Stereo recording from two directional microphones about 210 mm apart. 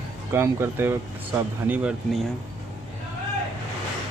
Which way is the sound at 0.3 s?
10° right (ahead or behind).